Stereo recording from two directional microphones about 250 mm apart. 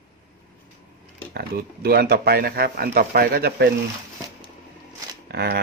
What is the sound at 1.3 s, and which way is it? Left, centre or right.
Speech, right.